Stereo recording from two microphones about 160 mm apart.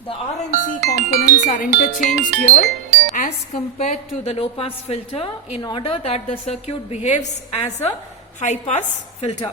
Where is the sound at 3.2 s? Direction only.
55° left (ahead or behind).